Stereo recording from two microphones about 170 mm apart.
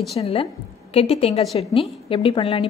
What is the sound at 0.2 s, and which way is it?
A woman's voice, 35° left (ahead or behind).